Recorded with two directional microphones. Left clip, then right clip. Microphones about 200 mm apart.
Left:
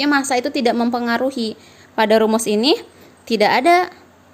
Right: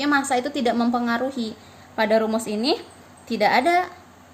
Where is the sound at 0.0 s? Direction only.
45° left (ahead or behind).